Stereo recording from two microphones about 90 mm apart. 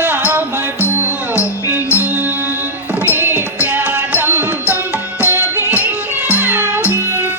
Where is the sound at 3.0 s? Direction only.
20° right (ahead or behind).